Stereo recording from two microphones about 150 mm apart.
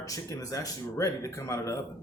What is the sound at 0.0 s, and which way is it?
A man's voice, 25° left (ahead or behind).